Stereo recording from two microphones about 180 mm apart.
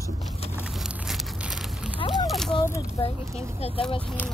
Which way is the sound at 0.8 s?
5° right (ahead or behind).